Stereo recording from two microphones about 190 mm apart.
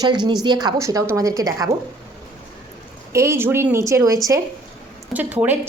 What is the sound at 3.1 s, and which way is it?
Speech, 15° right (ahead or behind).